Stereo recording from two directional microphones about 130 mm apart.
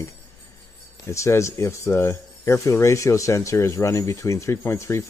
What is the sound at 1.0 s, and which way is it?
Speech, 20° left (ahead or behind).